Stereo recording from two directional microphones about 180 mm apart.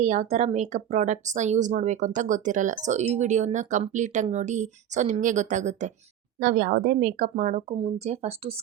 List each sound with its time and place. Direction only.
0.0 s speech: 40° right (ahead or behind)
6.4 s speech: 50° right (ahead or behind); by 8.5 s 35° right (ahead or behind)